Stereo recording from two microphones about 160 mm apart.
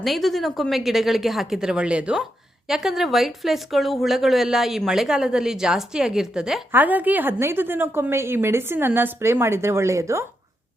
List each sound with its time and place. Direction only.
0.0 s a woman's voice: centre (ahead or behind); by 10.2 s 20° right (ahead or behind)